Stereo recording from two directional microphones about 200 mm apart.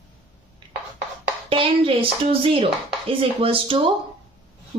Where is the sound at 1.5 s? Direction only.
25° right (ahead or behind).